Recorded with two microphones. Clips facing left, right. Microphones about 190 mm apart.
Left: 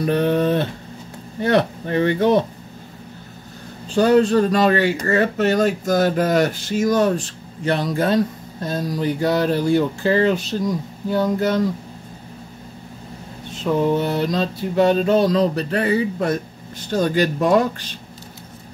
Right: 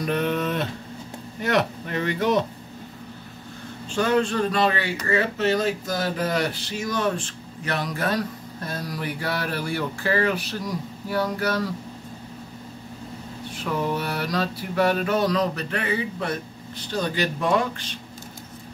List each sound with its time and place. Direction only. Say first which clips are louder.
0.0 s speech: left 6 dB; 30° left (ahead or behind)
3.9 s speech: left 7 dB; 35° left (ahead or behind)
13.5 s speech: left 8 dB; 25° left (ahead or behind); by 17.8 s 45° left (ahead or behind)